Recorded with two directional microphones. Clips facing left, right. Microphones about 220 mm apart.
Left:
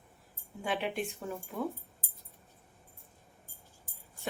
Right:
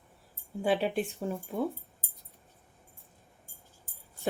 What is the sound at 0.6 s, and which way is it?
Speech, 30° right (ahead or behind).